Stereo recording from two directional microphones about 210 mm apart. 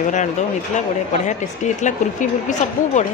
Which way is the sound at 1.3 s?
35° left (ahead or behind).